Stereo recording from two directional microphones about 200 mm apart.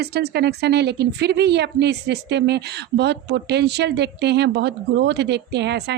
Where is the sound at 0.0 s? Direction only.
55° right (ahead or behind).